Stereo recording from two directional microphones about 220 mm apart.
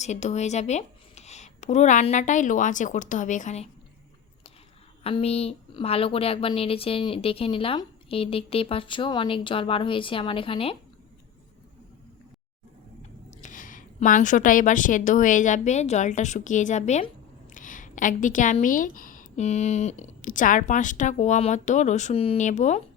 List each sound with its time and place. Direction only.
0.0 s a woman's voice: 30° left (ahead or behind)
5.0 s speech: 25° left (ahead or behind)
13.0 s a woman's voice: 30° left (ahead or behind)